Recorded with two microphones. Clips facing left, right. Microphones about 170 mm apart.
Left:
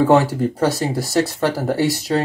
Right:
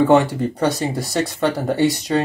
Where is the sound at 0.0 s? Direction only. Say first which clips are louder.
Even; centre (ahead or behind).